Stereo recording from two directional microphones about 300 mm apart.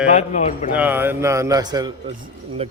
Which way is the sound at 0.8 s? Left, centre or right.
Centre.